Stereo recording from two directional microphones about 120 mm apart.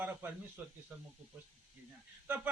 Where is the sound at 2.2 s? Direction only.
15° right (ahead or behind).